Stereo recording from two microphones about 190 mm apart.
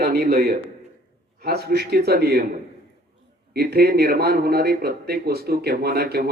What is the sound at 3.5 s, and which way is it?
A man's voice, 55° right (ahead or behind).